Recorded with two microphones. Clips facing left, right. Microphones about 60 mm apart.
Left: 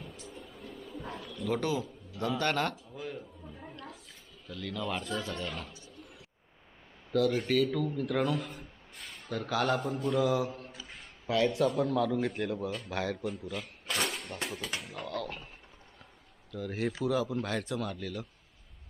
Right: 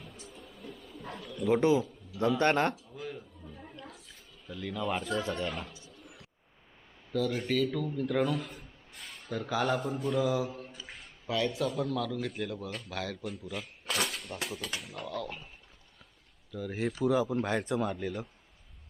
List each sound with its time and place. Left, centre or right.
0.3 s vehicle: centre
0.6 s bird: centre
1.4 s a man's voice: right
2.9 s a sound: centre
4.4 s speech: centre
7.1 s a man's voice: centre
10.9 s a sound: centre
11.5 s a man's voice: centre
13.2 s speech: centre
16.5 s speech: centre
17.1 s speech: right